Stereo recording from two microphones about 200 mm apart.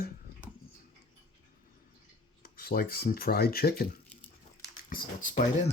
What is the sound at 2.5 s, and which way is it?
Speech, 50° left (ahead or behind).